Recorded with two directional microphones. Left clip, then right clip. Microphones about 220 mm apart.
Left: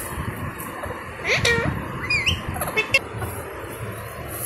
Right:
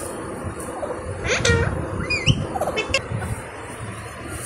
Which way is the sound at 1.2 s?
20° left (ahead or behind).